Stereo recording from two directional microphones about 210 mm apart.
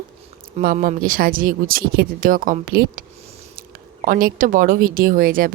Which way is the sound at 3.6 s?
45° right (ahead or behind).